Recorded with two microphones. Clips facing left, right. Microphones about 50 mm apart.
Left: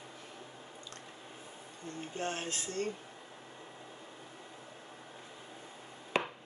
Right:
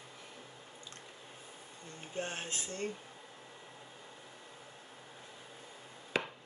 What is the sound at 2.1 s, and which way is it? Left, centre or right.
Speech, right.